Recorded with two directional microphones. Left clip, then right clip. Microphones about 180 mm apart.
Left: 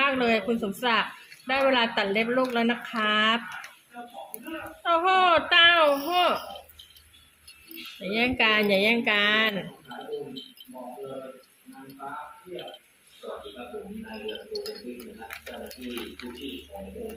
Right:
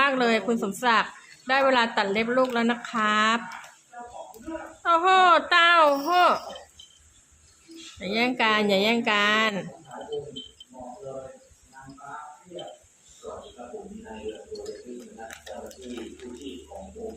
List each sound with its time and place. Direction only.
0.0 s a woman's voice: 10° right (ahead or behind)
4.8 s speech: 5° right (ahead or behind)
8.1 s a woman's voice: 5° right (ahead or behind)